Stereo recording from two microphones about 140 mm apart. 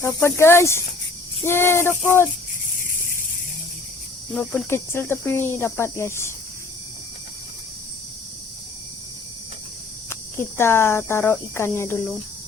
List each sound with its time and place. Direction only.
0.2 s speech: 20° left (ahead or behind)
1.5 s cricket: 15° left (ahead or behind)
2.7 s snake: 75° left (ahead or behind)
4.4 s cricket: 15° left (ahead or behind)
10.1 s cricket: 15° left (ahead or behind)